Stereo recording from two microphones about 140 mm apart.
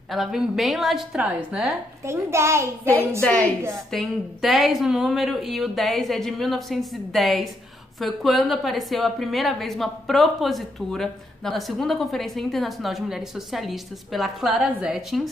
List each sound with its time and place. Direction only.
0.1 s a woman's voice: centre (ahead or behind)
2.0 s a child's voice: 20° right (ahead or behind)
3.2 s a woman's voice: 5° left (ahead or behind)